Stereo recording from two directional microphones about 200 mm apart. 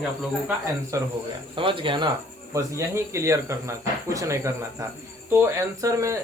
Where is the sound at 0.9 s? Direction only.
15° right (ahead or behind).